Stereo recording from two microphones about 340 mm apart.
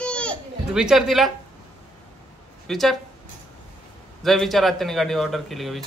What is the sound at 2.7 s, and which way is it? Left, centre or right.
Speech, centre.